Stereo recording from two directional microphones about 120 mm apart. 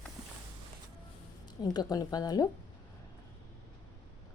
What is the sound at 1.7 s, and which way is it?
Speech, 30° left (ahead or behind).